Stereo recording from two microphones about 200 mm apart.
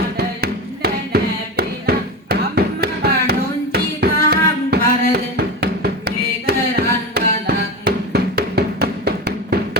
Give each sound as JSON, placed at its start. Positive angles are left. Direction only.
{"t": 0.2, "sound": "music", "side_deg": -55}